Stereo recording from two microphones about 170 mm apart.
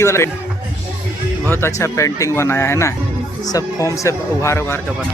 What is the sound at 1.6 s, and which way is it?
Speech, 15° left (ahead or behind).